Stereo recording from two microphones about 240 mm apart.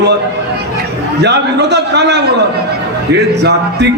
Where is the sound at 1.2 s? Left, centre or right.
Right.